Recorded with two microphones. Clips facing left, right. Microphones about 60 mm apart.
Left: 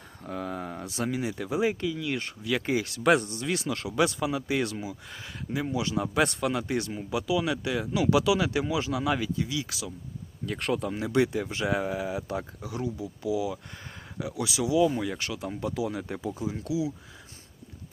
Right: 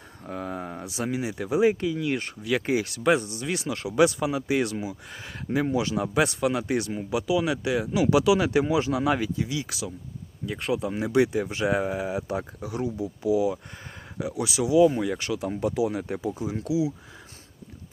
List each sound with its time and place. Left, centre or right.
0.2 s a sound: right
0.9 s speech: centre
3.0 s speech: centre
3.4 s speech: right
10.4 s speech: centre
10.9 s speech: centre